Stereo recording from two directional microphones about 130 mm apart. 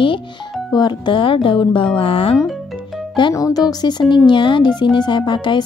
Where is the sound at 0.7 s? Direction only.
35° left (ahead or behind).